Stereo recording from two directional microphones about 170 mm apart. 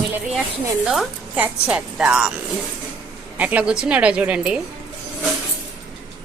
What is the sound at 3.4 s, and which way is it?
A woman's voice, 10° right (ahead or behind).